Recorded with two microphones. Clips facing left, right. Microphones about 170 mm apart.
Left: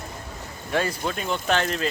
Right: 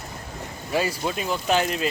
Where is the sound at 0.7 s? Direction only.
10° right (ahead or behind).